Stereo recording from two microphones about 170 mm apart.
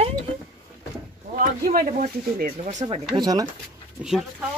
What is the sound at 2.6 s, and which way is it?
Speech, 35° right (ahead or behind).